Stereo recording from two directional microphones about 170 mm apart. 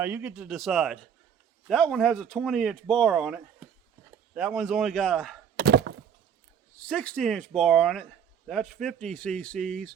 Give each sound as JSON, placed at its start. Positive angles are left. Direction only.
{"t": 0.0, "sound": "speech", "side_deg": -10}
{"t": 5.5, "sound": "thunk", "side_deg": -75}
{"t": 6.8, "sound": "speech", "side_deg": 5}